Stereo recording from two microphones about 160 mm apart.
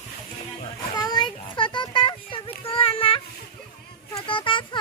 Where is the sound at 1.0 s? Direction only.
25° left (ahead or behind).